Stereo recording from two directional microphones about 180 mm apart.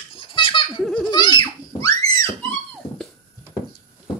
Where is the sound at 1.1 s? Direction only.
25° left (ahead or behind).